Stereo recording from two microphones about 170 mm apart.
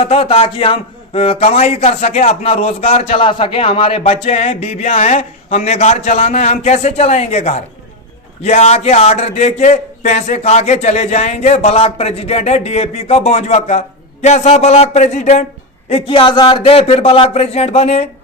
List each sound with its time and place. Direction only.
0.0 s a man's voice: 35° left (ahead or behind)